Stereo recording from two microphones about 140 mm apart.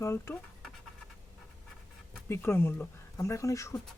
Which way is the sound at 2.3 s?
15° left (ahead or behind).